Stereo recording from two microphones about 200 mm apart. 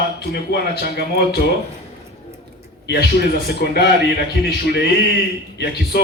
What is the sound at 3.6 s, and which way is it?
Speech, 55° left (ahead or behind).